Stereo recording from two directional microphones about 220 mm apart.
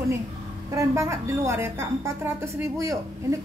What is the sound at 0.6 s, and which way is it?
A woman's voice, 15° right (ahead or behind).